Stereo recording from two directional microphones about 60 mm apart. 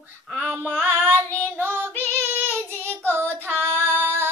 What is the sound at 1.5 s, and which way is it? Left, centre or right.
Female singing, right.